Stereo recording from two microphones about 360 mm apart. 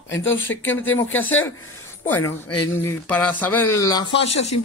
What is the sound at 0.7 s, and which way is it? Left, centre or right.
Speech, centre.